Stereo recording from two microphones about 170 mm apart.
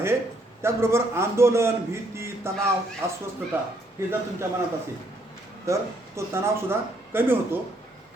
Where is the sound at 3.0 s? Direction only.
15° right (ahead or behind).